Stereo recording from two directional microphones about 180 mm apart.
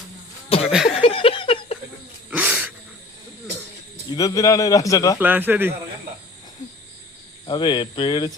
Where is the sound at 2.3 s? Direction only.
5° right (ahead or behind).